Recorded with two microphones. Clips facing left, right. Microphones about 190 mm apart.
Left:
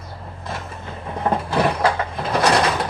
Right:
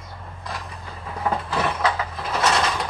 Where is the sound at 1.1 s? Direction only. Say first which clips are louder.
Left 4 dB; 30° left (ahead or behind).